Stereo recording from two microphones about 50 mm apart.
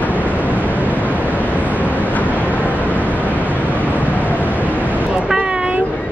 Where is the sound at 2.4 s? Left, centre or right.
Left.